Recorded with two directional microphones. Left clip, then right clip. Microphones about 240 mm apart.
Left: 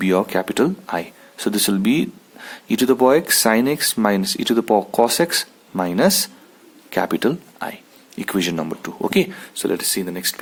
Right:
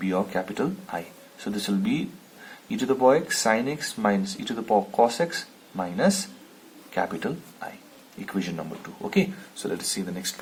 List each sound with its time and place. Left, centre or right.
0.0 s speech: left